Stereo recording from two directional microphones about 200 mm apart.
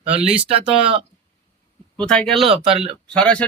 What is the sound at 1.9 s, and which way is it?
Speech, 5° left (ahead or behind).